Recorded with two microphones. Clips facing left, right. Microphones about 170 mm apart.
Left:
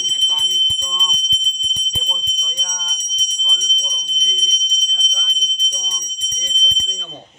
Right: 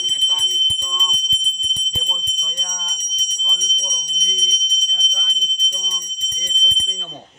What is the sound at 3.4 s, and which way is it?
Bicycle bell, 15° right (ahead or behind).